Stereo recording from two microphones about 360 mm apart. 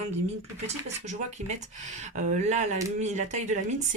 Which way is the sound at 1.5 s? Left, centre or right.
Centre.